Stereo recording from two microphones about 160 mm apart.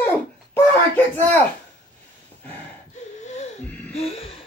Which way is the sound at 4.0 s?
40° left (ahead or behind).